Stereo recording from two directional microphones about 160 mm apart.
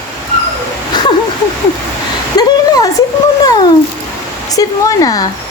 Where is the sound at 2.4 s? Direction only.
20° left (ahead or behind).